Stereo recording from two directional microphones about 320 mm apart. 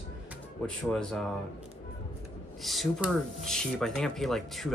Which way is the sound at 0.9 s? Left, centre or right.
Centre.